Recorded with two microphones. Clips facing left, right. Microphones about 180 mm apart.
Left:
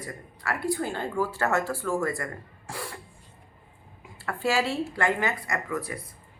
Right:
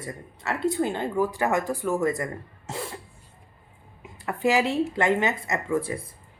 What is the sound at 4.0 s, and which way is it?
A woman's voice, 20° right (ahead or behind).